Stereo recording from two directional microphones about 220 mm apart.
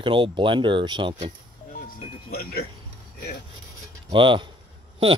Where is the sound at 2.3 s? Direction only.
45° left (ahead or behind).